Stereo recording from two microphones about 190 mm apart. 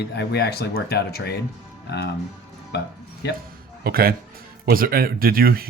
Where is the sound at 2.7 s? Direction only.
60° left (ahead or behind).